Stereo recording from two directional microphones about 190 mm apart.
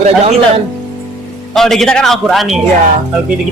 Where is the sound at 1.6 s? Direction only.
Centre (ahead or behind).